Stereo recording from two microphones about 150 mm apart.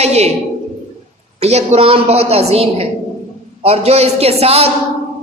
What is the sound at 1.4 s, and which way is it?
A woman's voice, 45° right (ahead or behind).